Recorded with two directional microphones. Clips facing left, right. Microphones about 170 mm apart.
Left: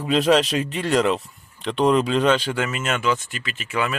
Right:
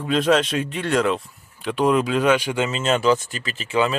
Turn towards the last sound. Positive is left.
turn(degrees=-30)  # may be behind; listen again after turning